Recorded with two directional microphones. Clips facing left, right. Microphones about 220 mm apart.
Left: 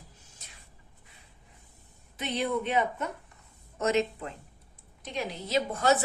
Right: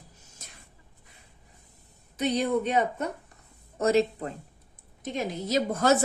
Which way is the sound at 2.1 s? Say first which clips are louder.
Right 5 dB; 40° right (ahead or behind).